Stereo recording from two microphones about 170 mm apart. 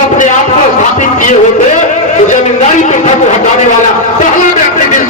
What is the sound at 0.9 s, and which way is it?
Music, 45° left (ahead or behind).